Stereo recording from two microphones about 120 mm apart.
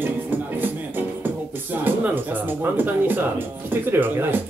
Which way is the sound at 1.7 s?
15° right (ahead or behind).